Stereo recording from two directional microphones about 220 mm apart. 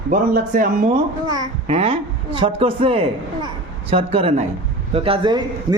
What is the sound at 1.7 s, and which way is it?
A man's voice, 25° right (ahead or behind).